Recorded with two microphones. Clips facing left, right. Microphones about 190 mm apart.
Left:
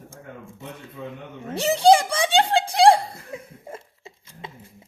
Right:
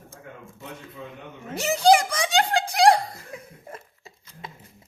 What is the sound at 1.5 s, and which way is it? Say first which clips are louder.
Chuckle: left 2 dB; 30° left (ahead or behind).